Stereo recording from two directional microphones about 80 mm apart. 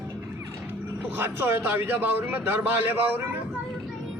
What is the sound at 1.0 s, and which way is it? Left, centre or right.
A man's voice, right.